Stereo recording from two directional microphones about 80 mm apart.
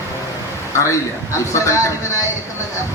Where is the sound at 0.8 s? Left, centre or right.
Left.